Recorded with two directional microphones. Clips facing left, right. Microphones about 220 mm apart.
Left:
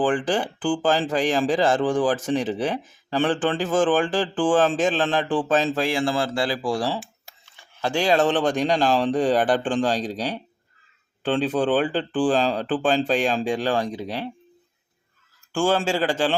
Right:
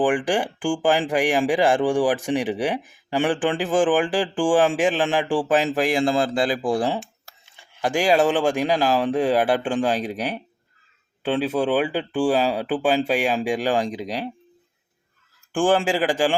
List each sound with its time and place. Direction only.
0.0 s speech: 15° right (ahead or behind)
15.5 s speech: 15° right (ahead or behind)